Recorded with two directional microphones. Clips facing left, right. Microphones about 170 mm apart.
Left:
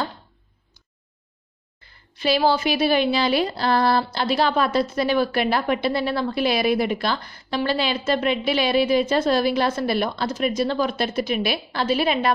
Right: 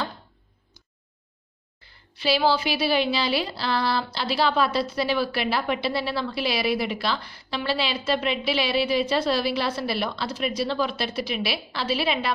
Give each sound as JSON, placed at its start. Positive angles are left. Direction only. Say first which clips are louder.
{"t": 2.1, "sound": "speech", "louder": "left 2 dB", "side_deg": 45}